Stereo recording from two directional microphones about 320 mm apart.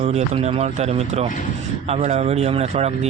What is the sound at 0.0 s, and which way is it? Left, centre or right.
Speech, centre.